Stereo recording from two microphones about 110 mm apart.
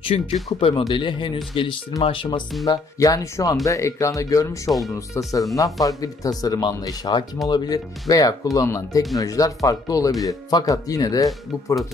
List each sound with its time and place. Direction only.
0.0 s speech: 65° left (ahead or behind); by 2.4 s 50° left (ahead or behind)
2.6 s speech: 30° left (ahead or behind)
4.6 s speech: centre (ahead or behind)
4.9 s speech: 30° left (ahead or behind)